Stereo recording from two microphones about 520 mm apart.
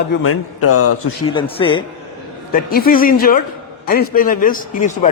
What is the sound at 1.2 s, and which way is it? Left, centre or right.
A man's voice, centre.